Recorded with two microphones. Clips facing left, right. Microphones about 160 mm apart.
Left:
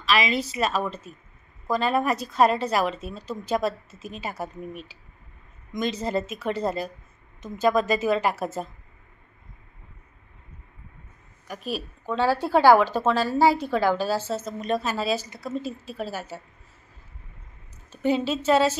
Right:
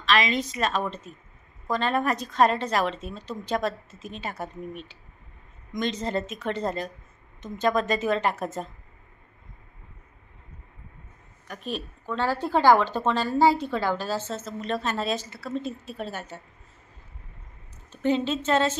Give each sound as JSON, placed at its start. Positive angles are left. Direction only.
{"t": 0.0, "sound": "a woman's voice", "side_deg": 10}
{"t": 11.4, "sound": "a woman's voice", "side_deg": 10}
{"t": 15.5, "sound": "a woman's voice", "side_deg": 0}
{"t": 18.0, "sound": "a woman's voice", "side_deg": 10}